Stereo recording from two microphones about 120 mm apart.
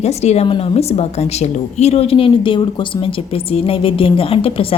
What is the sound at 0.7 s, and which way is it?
Speech, 60° left (ahead or behind).